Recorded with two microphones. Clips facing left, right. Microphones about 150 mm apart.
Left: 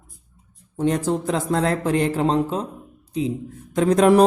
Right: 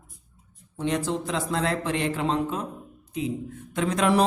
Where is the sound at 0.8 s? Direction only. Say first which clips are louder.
Left 5 dB; 45° left (ahead or behind).